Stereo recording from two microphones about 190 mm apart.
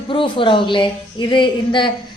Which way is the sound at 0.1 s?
25° left (ahead or behind).